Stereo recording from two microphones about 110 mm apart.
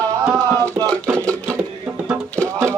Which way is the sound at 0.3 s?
35° right (ahead or behind).